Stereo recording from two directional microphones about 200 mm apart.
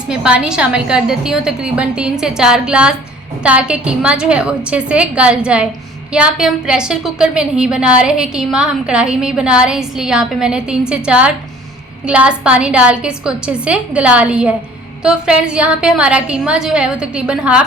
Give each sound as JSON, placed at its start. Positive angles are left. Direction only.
{"t": 0.1, "sound": "a woman's voice", "side_deg": -5}